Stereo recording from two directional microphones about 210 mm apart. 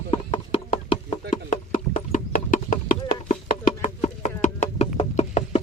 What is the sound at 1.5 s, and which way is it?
Music, 35° left (ahead or behind).